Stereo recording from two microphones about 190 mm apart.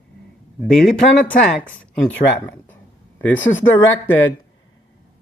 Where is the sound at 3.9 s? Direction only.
90° left.